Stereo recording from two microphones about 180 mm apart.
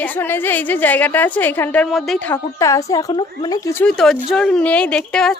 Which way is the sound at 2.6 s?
20° left (ahead or behind).